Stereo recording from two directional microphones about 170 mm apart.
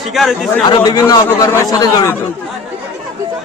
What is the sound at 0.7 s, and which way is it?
A man's voice, 25° left (ahead or behind).